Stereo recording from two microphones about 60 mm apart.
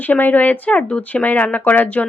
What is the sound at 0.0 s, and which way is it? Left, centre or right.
Speech, left.